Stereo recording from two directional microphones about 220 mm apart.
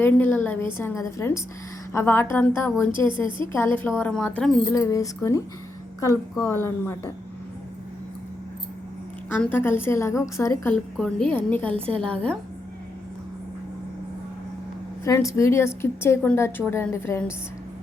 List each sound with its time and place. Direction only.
0.0 s a woman's voice: 10° left (ahead or behind)
3.1 s a woman's voice: 20° right (ahead or behind)
3.5 s a woman's voice: 10° left (ahead or behind)
4.7 s a woman's voice: 15° left (ahead or behind)
6.4 s a woman's voice: 10° left (ahead or behind)
9.3 s a woman's voice: 10° left (ahead or behind)
11.7 s a woman's voice: 25° right (ahead or behind)
12.0 s speech: 5° left (ahead or behind)
15.0 s a woman's voice: 15° left (ahead or behind)